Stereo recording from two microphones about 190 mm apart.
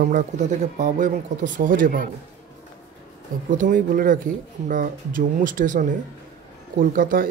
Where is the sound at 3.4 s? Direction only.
45° right (ahead or behind).